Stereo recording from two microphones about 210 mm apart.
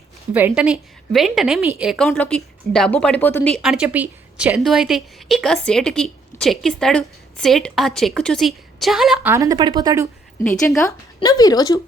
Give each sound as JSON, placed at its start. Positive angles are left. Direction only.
{"t": 0.3, "sound": "a woman's voice", "side_deg": -5}
{"t": 2.0, "sound": "a woman's voice", "side_deg": 10}
{"t": 9.3, "sound": "speech", "side_deg": -15}
{"t": 10.8, "sound": "a woman's voice", "side_deg": 15}